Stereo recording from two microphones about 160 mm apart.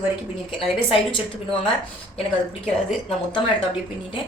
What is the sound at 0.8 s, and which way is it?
Speech, 35° left (ahead or behind).